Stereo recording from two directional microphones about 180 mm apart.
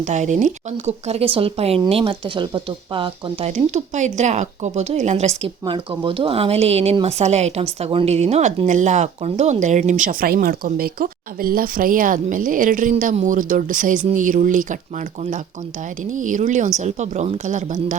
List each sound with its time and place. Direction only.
0.0 s speech: 40° right (ahead or behind)
3.5 s a woman's voice: 40° right (ahead or behind)